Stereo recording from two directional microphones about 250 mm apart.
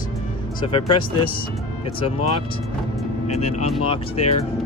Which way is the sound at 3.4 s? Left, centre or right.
Left.